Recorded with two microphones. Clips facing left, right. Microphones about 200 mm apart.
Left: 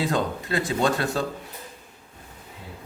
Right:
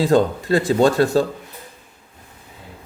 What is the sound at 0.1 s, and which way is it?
Speech, 35° right (ahead or behind).